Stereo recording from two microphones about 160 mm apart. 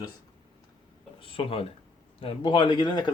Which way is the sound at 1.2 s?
35° left (ahead or behind).